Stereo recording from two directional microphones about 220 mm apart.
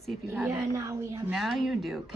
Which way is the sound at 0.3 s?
10° right (ahead or behind).